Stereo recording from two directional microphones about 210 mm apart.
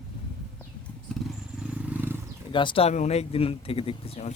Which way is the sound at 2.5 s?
20° left (ahead or behind).